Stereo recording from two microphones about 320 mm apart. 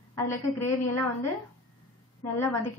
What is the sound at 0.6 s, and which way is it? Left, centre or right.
Speech, left.